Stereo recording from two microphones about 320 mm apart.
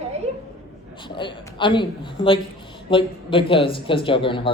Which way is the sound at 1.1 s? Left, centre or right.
Centre.